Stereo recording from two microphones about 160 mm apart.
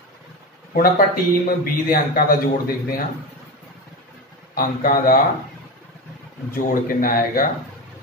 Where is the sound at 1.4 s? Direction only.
65° left (ahead or behind).